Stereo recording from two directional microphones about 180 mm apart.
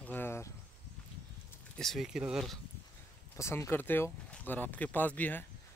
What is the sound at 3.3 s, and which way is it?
Speech, 15° left (ahead or behind).